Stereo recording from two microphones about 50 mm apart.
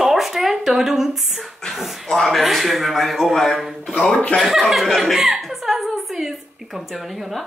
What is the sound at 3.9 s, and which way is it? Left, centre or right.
Speech, left.